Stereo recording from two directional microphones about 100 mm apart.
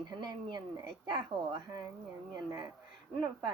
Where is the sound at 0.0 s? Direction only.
40° right (ahead or behind).